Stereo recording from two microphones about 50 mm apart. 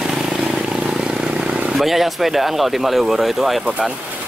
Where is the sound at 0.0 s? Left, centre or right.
Centre.